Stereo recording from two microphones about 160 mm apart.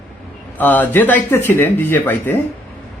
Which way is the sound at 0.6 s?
10° left (ahead or behind).